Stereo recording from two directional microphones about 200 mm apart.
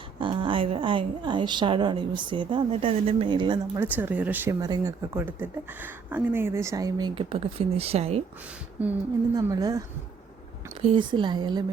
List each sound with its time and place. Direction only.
0.2 s a woman's voice: 25° right (ahead or behind)
3.8 s speech: 10° right (ahead or behind); by 8.2 s 30° right (ahead or behind)
8.8 s speech: 10° right (ahead or behind)
9.3 s a woman's voice: 20° right (ahead or behind)